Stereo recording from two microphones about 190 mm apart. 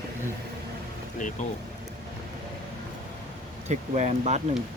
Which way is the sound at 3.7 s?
40° right (ahead or behind).